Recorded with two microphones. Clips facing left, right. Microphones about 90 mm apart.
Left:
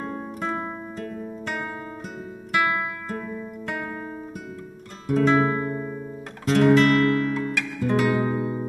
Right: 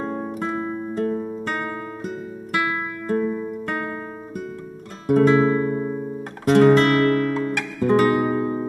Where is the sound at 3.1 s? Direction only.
30° right (ahead or behind).